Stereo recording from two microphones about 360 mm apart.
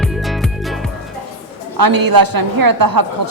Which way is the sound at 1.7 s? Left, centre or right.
Right.